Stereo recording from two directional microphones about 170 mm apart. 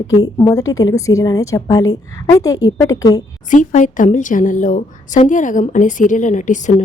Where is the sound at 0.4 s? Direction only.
20° left (ahead or behind).